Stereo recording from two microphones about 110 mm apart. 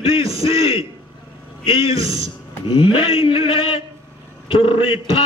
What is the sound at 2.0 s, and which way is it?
Speech, 30° right (ahead or behind).